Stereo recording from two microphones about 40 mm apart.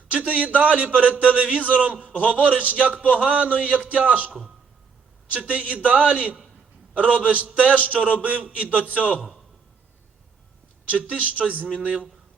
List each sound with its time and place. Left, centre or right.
0.1 s a man's voice: right
2.0 s a man's voice: left
2.3 s a man's voice: right
5.5 s a man's voice: right
10.8 s a man's voice: right